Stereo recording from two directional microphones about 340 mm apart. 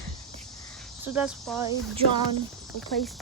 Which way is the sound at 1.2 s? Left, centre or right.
Centre.